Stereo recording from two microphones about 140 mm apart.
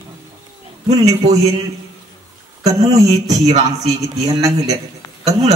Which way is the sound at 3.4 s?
55° right (ahead or behind).